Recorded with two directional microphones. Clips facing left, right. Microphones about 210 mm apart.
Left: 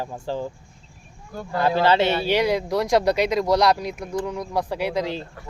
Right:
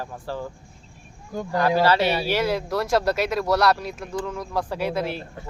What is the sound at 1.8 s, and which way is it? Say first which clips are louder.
Speech: left 3 dB; 25° left (ahead or behind).